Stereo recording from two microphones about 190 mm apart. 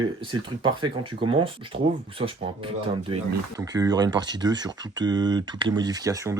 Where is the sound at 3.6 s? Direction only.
20° right (ahead or behind).